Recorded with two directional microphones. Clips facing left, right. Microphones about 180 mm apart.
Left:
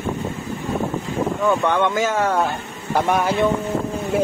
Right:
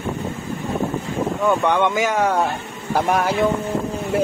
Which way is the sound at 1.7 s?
15° right (ahead or behind).